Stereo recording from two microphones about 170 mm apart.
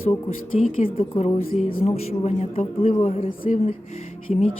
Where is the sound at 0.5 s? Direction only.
35° left (ahead or behind).